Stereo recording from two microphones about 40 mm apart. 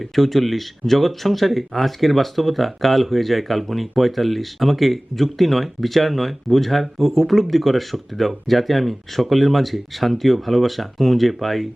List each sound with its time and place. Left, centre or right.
0.2 s speech: centre